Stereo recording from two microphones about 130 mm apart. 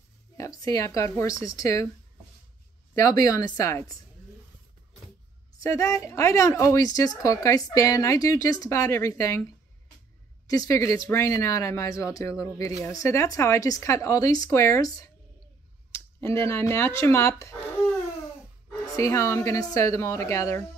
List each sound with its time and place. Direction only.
0.4 s a woman's voice: 25° left (ahead or behind)
2.9 s a woman's voice: 25° left (ahead or behind)
5.6 s a woman's voice: 25° left (ahead or behind)
10.4 s a woman's voice: 25° left (ahead or behind)
16.2 s a woman's voice: 20° left (ahead or behind)
18.9 s a woman's voice: 25° left (ahead or behind)